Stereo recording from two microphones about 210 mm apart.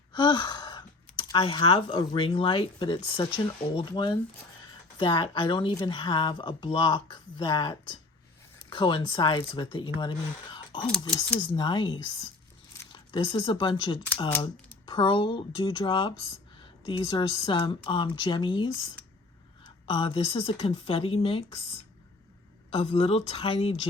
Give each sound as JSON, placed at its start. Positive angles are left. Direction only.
{"t": 0.1, "sound": "speech", "side_deg": 20}
{"t": 22.7, "sound": "speech", "side_deg": 30}